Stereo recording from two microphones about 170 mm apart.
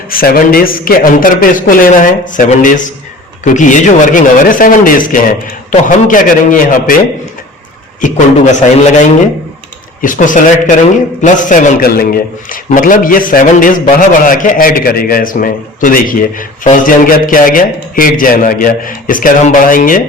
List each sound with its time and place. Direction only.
0.1 s a man's voice: 60° left (ahead or behind)
8.0 s a man's voice: 45° left (ahead or behind)
10.0 s a man's voice: 50° left (ahead or behind)